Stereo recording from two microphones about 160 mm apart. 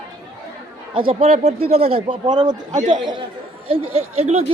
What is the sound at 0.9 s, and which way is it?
A man's voice, 40° right (ahead or behind).